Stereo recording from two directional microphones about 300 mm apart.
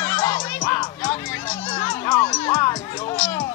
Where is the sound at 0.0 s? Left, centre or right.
Centre.